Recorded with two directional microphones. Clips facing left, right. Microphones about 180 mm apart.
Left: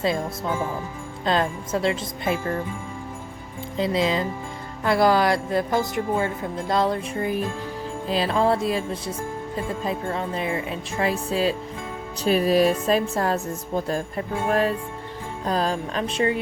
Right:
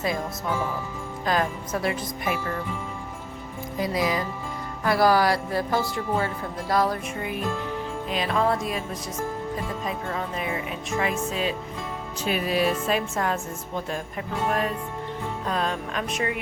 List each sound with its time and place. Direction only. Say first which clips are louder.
1.2 s speech: left 2 dB; 25° left (ahead or behind)
3.8 s a woman's voice: left 3 dB; 25° left (ahead or behind)